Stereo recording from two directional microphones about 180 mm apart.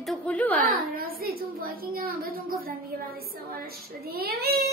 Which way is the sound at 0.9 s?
55° right (ahead or behind).